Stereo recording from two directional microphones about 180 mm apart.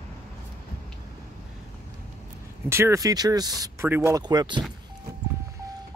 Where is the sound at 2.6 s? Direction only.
15° right (ahead or behind).